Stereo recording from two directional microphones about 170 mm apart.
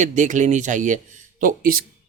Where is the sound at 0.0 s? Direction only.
45° right (ahead or behind).